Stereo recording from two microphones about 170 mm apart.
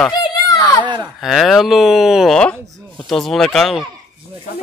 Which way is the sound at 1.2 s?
Centre (ahead or behind).